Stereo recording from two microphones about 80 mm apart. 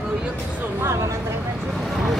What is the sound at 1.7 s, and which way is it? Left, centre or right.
Vehicle, centre.